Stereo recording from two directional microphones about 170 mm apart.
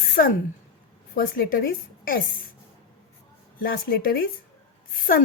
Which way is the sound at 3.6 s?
60° left (ahead or behind).